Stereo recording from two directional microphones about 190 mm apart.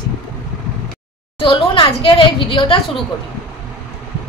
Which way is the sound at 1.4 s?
25° left (ahead or behind).